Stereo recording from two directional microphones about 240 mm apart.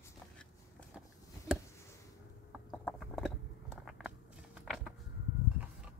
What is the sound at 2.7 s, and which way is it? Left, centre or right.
Biting, centre.